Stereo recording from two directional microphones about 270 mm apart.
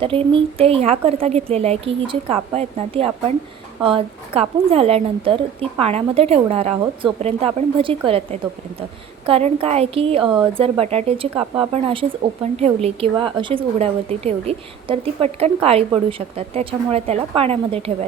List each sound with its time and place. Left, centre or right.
0.0 s a woman's voice: centre